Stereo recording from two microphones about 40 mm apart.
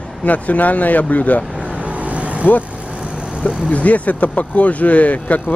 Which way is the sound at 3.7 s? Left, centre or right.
Left.